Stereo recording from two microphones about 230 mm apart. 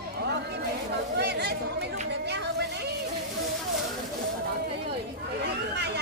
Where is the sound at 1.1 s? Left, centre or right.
Right.